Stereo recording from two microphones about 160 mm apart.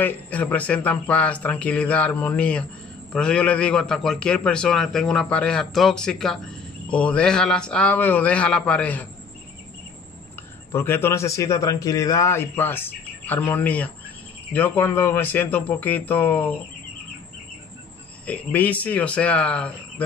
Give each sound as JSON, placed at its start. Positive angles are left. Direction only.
{"t": 0.0, "sound": "a man's voice", "side_deg": 10}
{"t": 10.7, "sound": "a man's voice", "side_deg": 15}
{"t": 18.2, "sound": "a man's voice", "side_deg": 10}